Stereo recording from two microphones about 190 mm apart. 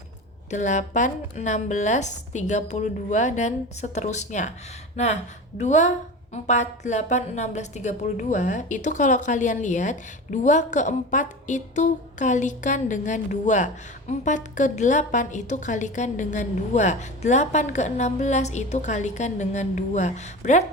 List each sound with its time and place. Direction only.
0.5 s a woman's voice: 40° left (ahead or behind)
5.5 s a woman's voice: 40° left (ahead or behind)